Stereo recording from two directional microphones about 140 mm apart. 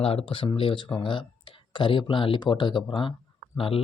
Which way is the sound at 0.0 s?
40° left (ahead or behind).